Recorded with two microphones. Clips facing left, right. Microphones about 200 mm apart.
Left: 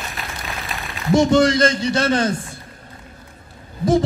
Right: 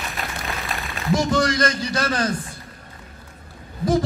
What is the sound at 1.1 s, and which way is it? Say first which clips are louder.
A man's voice: left 6 dB; 25° left (ahead or behind).